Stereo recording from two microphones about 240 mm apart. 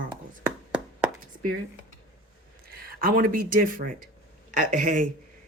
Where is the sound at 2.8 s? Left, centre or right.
Right.